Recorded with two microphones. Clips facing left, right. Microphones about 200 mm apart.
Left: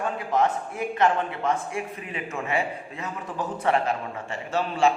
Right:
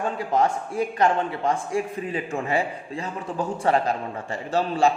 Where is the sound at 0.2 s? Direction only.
30° right (ahead or behind).